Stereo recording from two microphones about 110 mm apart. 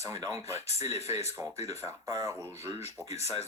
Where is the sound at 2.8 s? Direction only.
80° left.